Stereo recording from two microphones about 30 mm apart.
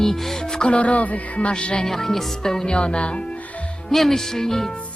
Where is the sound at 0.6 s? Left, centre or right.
Left.